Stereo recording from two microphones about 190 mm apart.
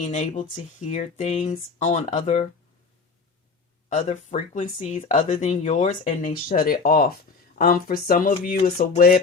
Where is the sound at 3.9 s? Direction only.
40° left (ahead or behind).